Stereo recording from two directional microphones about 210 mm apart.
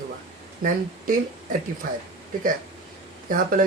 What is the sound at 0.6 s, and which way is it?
Speech, 40° right (ahead or behind).